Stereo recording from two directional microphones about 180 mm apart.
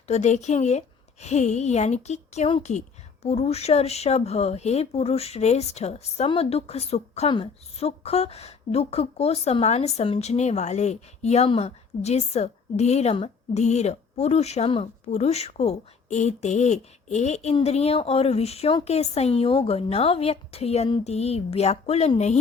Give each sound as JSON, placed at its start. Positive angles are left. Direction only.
{"t": 0.1, "sound": "speech", "side_deg": 40}